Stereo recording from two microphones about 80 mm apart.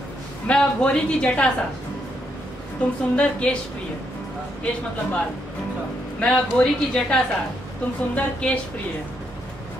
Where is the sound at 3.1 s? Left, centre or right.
Centre.